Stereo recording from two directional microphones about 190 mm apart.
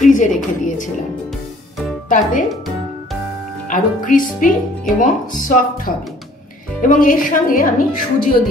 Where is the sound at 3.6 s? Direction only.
45° left (ahead or behind).